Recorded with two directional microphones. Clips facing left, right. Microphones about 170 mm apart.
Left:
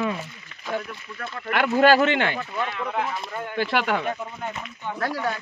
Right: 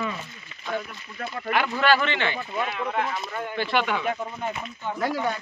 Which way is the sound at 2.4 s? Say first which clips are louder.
Even; 15° right (ahead or behind).